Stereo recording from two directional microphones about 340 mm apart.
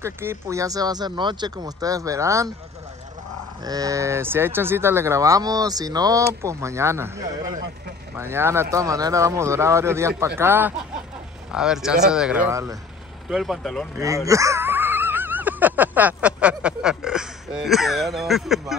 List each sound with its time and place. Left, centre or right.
0.0 s speech: centre
3.6 s speech: centre